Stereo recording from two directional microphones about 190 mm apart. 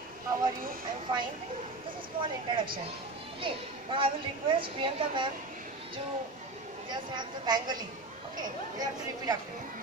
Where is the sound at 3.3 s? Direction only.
25° right (ahead or behind).